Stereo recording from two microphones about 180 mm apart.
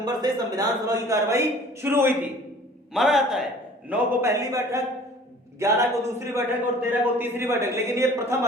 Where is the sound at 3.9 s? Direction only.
10° right (ahead or behind).